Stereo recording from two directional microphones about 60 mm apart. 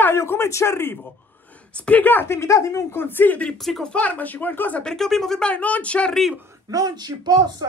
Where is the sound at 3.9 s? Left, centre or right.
Left.